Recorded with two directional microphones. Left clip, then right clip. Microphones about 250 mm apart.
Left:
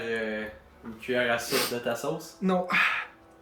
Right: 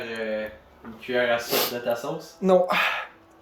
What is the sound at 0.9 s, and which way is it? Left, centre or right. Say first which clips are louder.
Speech: right 3 dB; centre.